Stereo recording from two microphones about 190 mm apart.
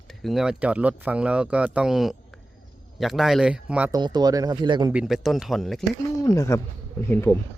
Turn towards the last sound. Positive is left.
turn(degrees=15)  # may be behind; listen again after turning